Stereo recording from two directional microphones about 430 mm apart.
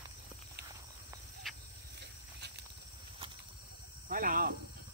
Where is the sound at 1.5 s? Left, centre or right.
Centre.